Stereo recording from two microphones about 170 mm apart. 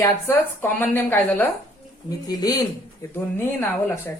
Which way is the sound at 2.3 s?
20° left (ahead or behind).